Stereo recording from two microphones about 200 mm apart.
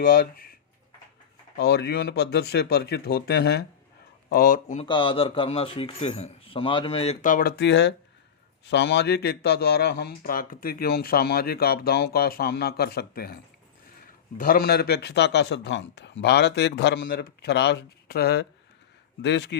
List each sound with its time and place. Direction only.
0.0 s a man's voice: 45° left (ahead or behind)
1.5 s a man's voice: 55° left (ahead or behind); by 4.9 s 40° left (ahead or behind)
4.9 s a man's voice: 25° left (ahead or behind); by 19.5 s 60° left (ahead or behind)